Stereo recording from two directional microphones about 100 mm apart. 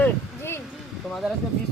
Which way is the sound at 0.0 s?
25° left (ahead or behind).